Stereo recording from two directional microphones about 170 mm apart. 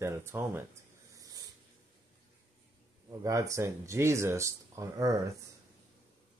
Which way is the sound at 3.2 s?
20° right (ahead or behind).